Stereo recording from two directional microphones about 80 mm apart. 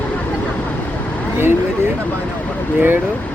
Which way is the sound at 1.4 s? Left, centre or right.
Right.